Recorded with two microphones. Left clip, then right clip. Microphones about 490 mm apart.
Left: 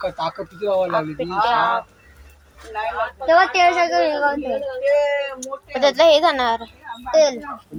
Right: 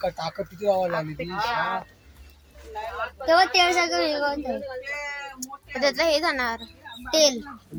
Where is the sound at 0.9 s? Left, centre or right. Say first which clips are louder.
Left 8 dB; right.